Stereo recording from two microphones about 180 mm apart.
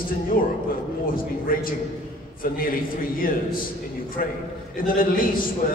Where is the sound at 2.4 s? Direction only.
50° left (ahead or behind).